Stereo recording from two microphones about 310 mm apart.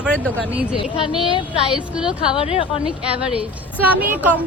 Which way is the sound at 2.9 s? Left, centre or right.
Centre.